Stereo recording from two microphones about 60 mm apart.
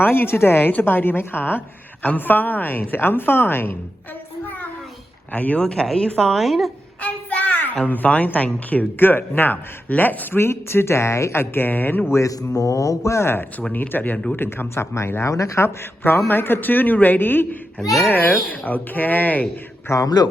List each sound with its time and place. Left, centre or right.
0.0 s a woman's voice: left
4.4 s a sound: left
5.3 s speech: left
5.8 s a woman's voice: centre
7.0 s a sound: left
7.9 s a woman's voice: left
10.4 s speech: left
12.1 s speech: left
13.7 s a woman's voice: left
14.9 s speech: left
15.3 s speech: left
16.0 s a woman's voice: left
19.9 s speech: left